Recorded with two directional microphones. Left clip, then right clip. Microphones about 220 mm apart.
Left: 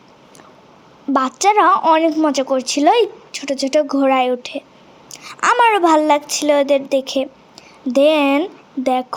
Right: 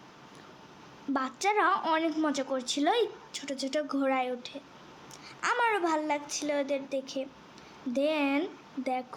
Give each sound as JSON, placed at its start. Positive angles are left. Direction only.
{"t": 1.1, "sound": "a woman's voice", "side_deg": 30}